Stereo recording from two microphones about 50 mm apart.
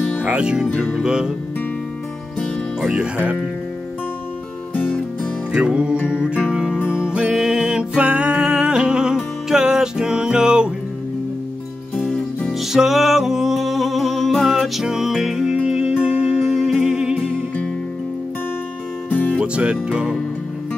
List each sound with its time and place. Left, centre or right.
0.2 s speech: right
1.0 s music: centre
5.5 s music: right
12.4 s music: centre
19.0 s music: left
19.4 s music: right